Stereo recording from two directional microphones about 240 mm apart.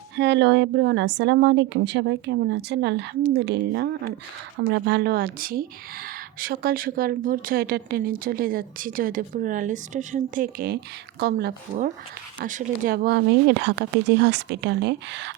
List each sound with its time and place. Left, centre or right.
0.2 s speech: right